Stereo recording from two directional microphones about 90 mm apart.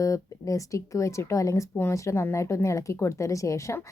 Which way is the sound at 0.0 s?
35° left (ahead or behind).